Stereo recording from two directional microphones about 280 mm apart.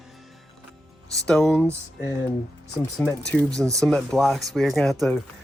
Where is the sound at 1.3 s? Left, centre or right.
Centre.